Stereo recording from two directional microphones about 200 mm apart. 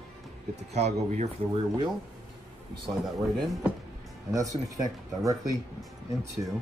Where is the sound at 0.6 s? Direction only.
35° right (ahead or behind).